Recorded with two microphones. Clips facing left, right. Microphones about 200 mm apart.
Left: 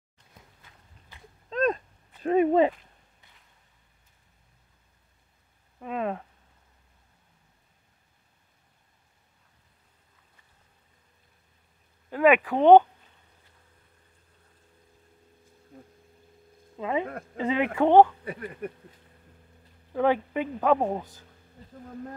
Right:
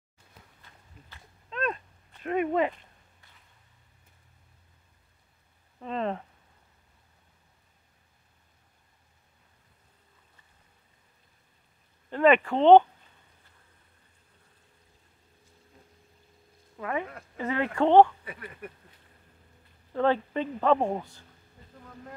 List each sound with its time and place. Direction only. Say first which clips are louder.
1.5 s a sound: left 6 dB; 35° left (ahead or behind)
2.2 s speech: left 6 dB; 30° left (ahead or behind)
5.8 s a sound: left 1 dB; 10° left (ahead or behind)
12.1 s speech: left 1 dB; 5° left (ahead or behind)
16.7 s a man's voice: left 4 dB; 20° left (ahead or behind)
18.2 s speech: left 7 dB; 40° left (ahead or behind)
19.9 s a man's voice: left 1 dB; 10° left (ahead or behind)